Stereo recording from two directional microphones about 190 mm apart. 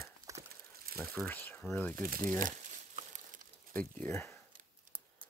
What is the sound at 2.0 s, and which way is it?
Speech, 50° right (ahead or behind).